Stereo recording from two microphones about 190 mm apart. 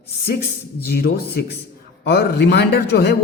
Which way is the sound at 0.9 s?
55° left (ahead or behind).